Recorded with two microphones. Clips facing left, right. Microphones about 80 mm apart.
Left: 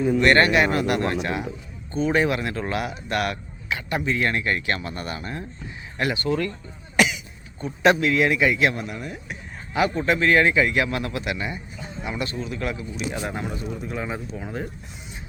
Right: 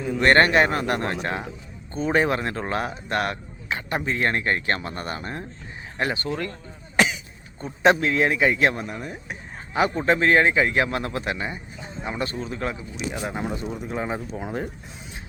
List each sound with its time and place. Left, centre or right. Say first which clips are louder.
0.2 s speech: right 3 dB; right
6.9 s cough: left 1 dB; right
7.6 s speech: even; right
13.1 s speech: right 1 dB; centre
13.9 s speech: right 4 dB; right